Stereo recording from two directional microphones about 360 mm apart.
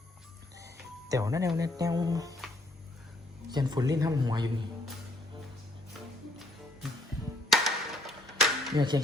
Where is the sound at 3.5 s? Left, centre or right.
Centre.